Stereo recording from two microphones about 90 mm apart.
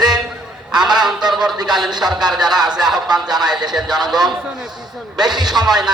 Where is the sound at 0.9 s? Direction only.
55° right (ahead or behind).